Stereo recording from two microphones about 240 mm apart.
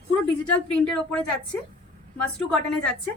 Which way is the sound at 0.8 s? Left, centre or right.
Centre.